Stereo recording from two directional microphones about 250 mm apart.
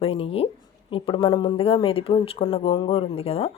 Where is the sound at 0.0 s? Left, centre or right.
Left.